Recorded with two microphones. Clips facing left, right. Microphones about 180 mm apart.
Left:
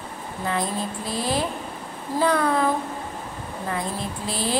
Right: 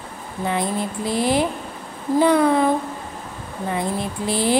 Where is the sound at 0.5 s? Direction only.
25° right (ahead or behind).